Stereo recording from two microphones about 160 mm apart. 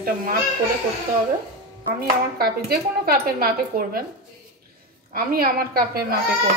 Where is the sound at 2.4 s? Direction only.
75° right (ahead or behind).